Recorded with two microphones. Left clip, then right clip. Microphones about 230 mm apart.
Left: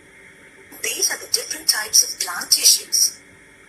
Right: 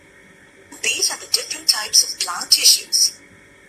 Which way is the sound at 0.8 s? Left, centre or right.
Centre.